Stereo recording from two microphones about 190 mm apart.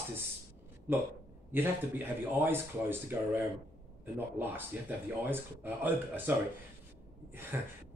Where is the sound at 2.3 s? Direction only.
10° right (ahead or behind).